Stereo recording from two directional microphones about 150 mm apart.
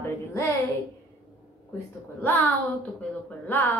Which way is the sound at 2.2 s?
10° left (ahead or behind).